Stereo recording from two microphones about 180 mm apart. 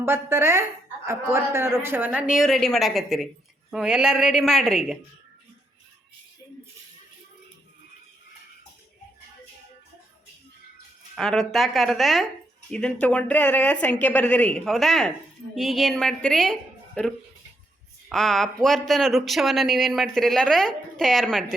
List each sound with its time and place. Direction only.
0.0 s a man's voice: 15° right (ahead or behind)
11.1 s speech: centre (ahead or behind)